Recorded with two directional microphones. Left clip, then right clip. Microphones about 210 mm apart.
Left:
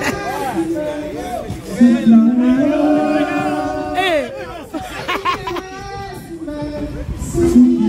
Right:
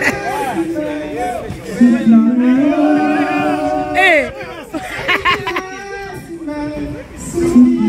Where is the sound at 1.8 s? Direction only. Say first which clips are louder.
Even; 45° right (ahead or behind).